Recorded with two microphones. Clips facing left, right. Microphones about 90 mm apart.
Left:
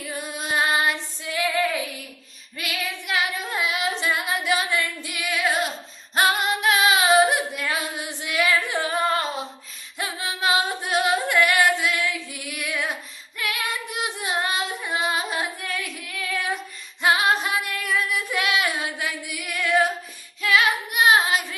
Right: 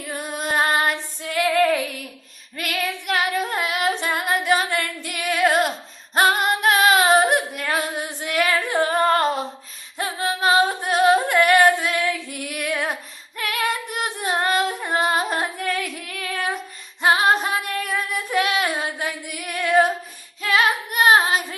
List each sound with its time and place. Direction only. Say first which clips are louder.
0.0 s female singing: right 3 dB; 50° right (ahead or behind)
6.1 s singing: right 3 dB; 45° right (ahead or behind)
10.0 s singing: right 4 dB; 40° right (ahead or behind)
17.0 s female singing: right 3 dB; 35° right (ahead or behind)
20.4 s child singing: right 1 dB; 40° right (ahead or behind)